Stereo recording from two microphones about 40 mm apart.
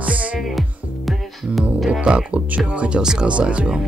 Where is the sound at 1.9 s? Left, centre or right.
Right.